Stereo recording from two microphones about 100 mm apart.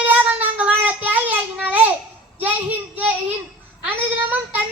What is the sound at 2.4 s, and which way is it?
A child's voice, 15° right (ahead or behind).